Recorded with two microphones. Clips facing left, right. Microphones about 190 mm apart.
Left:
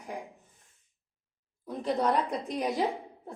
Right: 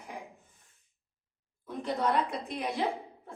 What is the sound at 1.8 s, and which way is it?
Speech, 40° left (ahead or behind).